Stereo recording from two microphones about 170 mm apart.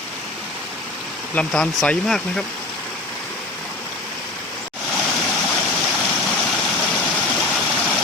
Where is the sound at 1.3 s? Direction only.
5° left (ahead or behind).